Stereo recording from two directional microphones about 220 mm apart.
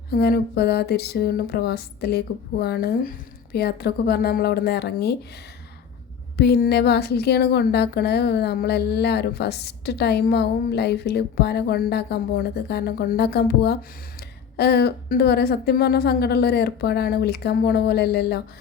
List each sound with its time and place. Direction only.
0.1 s a woman's voice: 45° left (ahead or behind)
6.3 s a woman's voice: 45° left (ahead or behind)